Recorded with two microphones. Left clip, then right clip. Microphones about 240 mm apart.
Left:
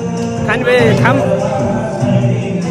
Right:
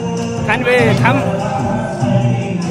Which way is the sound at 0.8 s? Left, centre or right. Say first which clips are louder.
Left 2 dB; right.